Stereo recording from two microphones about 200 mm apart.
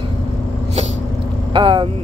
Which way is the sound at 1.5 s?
25° right (ahead or behind).